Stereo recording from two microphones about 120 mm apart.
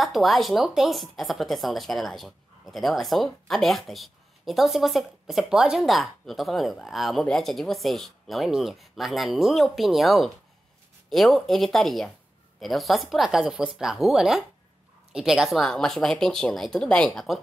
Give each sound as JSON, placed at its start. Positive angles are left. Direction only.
{"t": 0.0, "sound": "speech", "side_deg": 0}